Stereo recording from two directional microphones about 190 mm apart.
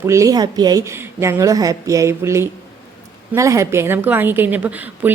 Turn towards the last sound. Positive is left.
turn(degrees=-10)  # may be behind; listen again after turning